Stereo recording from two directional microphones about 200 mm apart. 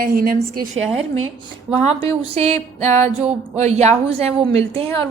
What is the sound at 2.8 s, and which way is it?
A woman's voice, 35° right (ahead or behind).